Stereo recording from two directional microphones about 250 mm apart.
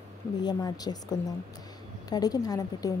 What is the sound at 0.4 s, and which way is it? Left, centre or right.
Speech, centre.